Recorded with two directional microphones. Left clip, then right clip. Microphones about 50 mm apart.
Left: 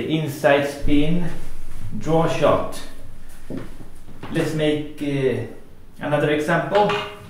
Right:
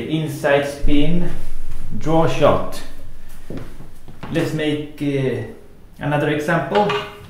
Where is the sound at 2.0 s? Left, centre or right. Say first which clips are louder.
Right 3 dB; centre.